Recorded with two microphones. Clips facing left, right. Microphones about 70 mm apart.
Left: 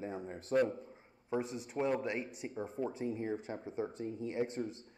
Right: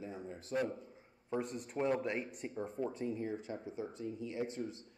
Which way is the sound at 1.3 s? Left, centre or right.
Centre.